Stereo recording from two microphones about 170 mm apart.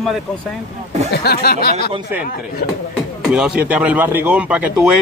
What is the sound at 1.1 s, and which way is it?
Speech, 65° left (ahead or behind).